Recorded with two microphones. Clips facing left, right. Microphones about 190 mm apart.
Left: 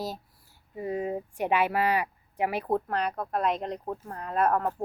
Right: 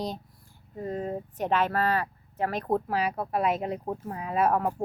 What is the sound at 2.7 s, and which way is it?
A woman's voice, 5° right (ahead or behind).